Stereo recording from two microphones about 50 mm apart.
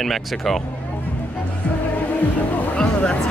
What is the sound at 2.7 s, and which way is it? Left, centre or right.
Music, left.